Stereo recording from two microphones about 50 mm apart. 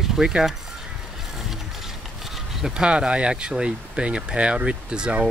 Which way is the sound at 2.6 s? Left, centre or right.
Centre.